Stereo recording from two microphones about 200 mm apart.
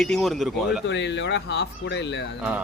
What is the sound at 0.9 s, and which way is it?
Speech, 60° left (ahead or behind).